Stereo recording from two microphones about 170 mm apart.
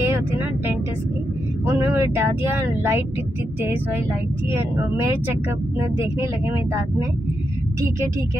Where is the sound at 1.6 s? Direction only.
15° right (ahead or behind).